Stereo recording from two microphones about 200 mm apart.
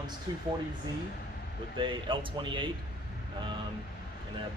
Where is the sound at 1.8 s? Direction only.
25° right (ahead or behind).